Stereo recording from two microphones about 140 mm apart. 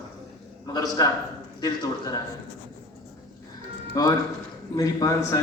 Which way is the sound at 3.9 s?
25° left (ahead or behind).